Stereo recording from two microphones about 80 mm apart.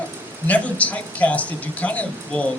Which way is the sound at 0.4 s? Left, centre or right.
Centre.